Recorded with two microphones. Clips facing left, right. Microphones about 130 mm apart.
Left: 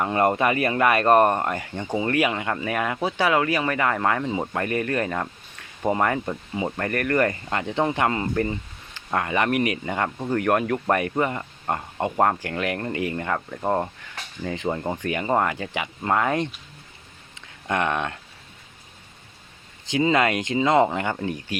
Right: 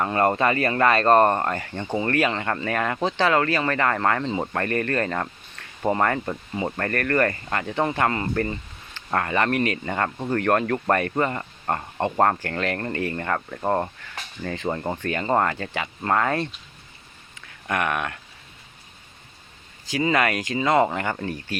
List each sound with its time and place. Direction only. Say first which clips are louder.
0.0 s speech: even; 15° left (ahead or behind)
14.4 s speech: left 1 dB; 15° left (ahead or behind)
17.7 s speech: left 1 dB; 25° left (ahead or behind)
19.8 s speech: left 2 dB; 20° left (ahead or behind)